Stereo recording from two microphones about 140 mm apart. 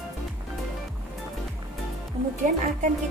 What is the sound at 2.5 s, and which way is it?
Music, 70° right (ahead or behind).